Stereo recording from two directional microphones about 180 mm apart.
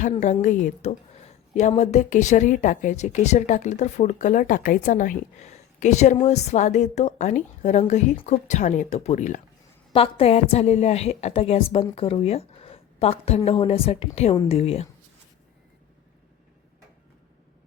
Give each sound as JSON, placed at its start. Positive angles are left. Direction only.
{"t": 0.4, "sound": "speech", "side_deg": 40}
{"t": 9.9, "sound": "speech", "side_deg": 30}